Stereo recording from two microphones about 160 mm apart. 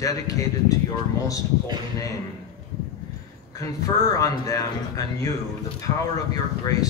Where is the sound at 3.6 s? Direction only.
20° left (ahead or behind).